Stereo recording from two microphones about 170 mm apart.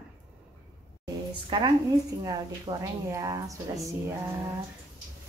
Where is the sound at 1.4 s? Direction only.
30° right (ahead or behind).